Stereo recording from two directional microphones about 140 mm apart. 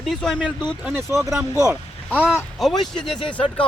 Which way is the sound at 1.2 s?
20° right (ahead or behind).